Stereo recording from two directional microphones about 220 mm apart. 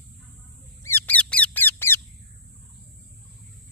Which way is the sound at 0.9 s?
10° left (ahead or behind).